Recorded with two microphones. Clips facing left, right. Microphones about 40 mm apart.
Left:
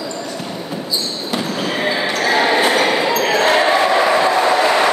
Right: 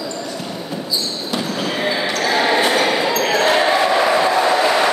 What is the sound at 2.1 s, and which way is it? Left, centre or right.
Basketball bounce, left.